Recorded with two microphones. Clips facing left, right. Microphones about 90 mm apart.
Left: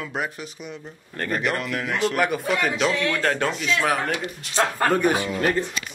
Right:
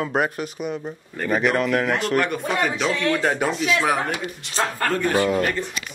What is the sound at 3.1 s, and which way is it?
A man's voice, 10° right (ahead or behind).